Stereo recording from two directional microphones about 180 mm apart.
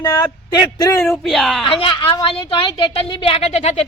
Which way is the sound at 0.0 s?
20° left (ahead or behind).